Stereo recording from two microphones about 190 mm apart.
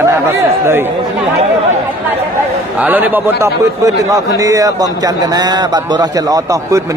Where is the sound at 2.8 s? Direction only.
10° right (ahead or behind).